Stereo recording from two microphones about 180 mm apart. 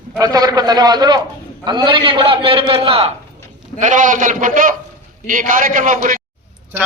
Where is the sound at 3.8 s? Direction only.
45° right (ahead or behind).